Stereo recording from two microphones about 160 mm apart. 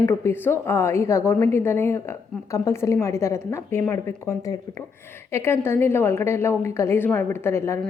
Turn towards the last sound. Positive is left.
turn(degrees=15)  # may be behind; listen again after turning